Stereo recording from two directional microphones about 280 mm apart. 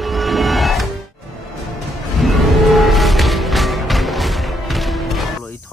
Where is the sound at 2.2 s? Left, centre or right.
Centre.